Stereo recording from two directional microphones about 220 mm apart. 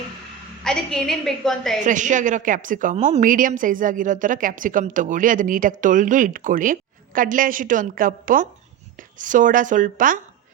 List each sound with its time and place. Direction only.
0.6 s a woman's voice: 5° left (ahead or behind)
1.8 s a woman's voice: 35° right (ahead or behind)